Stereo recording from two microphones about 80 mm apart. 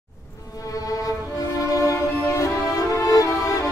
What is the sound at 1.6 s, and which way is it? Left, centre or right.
Music, left.